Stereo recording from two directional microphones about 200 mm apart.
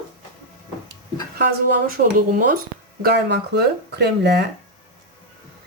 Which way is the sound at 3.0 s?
60° right (ahead or behind).